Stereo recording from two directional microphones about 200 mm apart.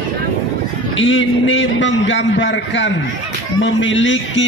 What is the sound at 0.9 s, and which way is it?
A man's voice, 70° left (ahead or behind).